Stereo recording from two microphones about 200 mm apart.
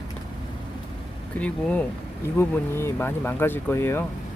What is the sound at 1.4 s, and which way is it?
Speech, 5° left (ahead or behind).